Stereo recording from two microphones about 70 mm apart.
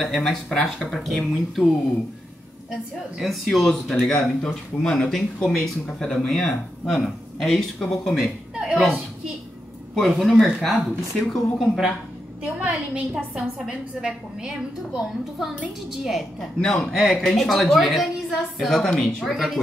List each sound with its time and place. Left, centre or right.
0.0 s speech: centre
2.7 s speech: centre
8.5 s a woman's voice: centre
9.9 s speech: centre
12.4 s a woman's voice: right
15.3 s speech: centre
16.5 s speech: centre
19.3 s speech: centre